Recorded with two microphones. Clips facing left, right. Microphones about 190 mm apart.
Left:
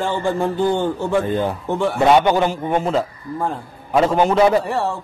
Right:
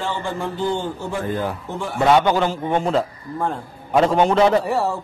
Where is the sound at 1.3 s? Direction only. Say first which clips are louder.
Left 4 dB; 25° left (ahead or behind).